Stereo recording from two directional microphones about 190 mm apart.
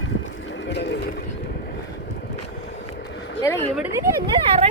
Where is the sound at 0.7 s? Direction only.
65° left (ahead or behind).